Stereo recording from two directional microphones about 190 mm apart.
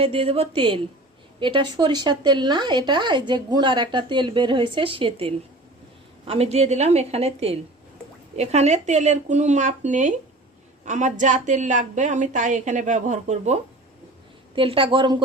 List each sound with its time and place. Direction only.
0.0 s a woman's voice: 30° right (ahead or behind)